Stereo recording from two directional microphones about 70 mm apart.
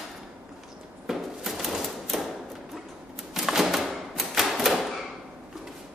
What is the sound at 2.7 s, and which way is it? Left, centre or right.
Typewriter, centre.